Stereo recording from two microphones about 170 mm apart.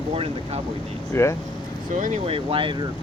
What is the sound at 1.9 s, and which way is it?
Speech, 45° right (ahead or behind).